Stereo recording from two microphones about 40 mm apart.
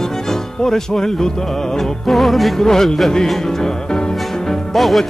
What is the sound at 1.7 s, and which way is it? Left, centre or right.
Music, centre.